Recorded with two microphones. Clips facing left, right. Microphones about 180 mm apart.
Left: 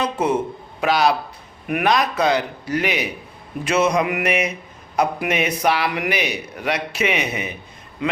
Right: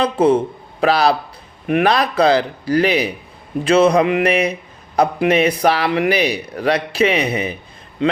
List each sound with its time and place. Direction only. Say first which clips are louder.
0.0 s a man's voice: right 6 dB; 30° right (ahead or behind)